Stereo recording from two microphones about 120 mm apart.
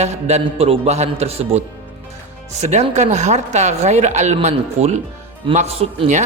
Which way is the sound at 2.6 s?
70° right (ahead or behind).